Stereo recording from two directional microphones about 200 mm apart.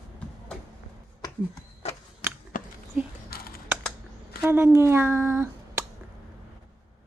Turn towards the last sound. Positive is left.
turn(degrees=-10)  # may be behind; listen again after turning